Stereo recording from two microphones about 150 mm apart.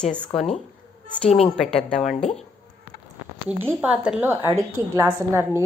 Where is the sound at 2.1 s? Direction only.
45° left (ahead or behind).